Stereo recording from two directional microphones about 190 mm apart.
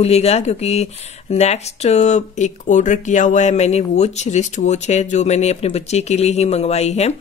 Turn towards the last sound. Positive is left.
turn(degrees=35)  # may be behind; listen again after turning